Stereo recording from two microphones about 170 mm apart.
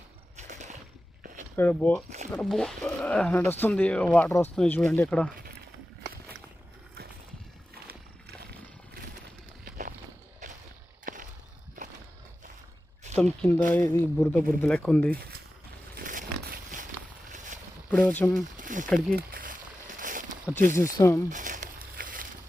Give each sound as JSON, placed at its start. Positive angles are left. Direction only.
{"t": 0.3, "sound": "a sound", "side_deg": -45}
{"t": 1.5, "sound": "speech", "side_deg": 10}
{"t": 2.0, "sound": "zipper", "side_deg": -40}
{"t": 2.3, "sound": "speech", "side_deg": 5}
{"t": 4.5, "sound": "speech", "side_deg": 5}
{"t": 9.6, "sound": "walk", "side_deg": -50}
{"t": 10.4, "sound": "a sound", "side_deg": -45}
{"t": 13.1, "sound": "speech", "side_deg": 10}
{"t": 16.0, "sound": "biting", "side_deg": -55}
{"t": 17.3, "sound": "a sound", "side_deg": -45}
{"t": 17.9, "sound": "speech", "side_deg": 10}
{"t": 18.5, "sound": "a sound", "side_deg": -50}
{"t": 21.0, "sound": "speech", "side_deg": 15}
{"t": 21.2, "sound": "crumpling", "side_deg": -50}